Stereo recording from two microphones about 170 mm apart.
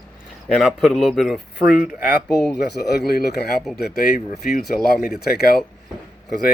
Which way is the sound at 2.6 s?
75° left (ahead or behind).